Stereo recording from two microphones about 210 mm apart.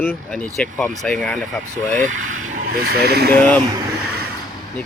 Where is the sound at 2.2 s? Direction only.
70° right (ahead or behind).